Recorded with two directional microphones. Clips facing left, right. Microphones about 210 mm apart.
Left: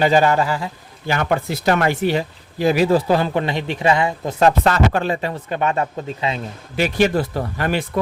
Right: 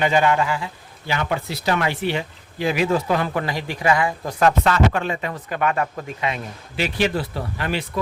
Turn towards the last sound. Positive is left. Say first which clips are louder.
# left 4 dB
turn(degrees=50)  # may be behind; listen again after turning